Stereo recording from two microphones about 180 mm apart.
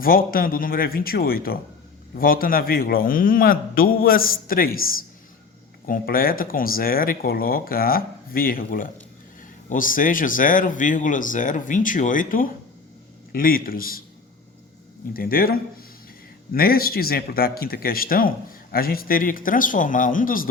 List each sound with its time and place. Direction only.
0.0 s speech: 55° left (ahead or behind)
15.1 s a man's voice: 55° left (ahead or behind)